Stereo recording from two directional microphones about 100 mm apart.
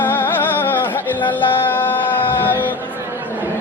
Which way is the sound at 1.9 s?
20° left (ahead or behind).